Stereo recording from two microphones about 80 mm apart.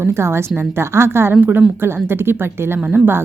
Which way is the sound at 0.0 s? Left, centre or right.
Right.